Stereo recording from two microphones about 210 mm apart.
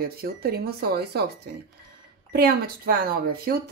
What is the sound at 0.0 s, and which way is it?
A woman's voice, 45° right (ahead or behind).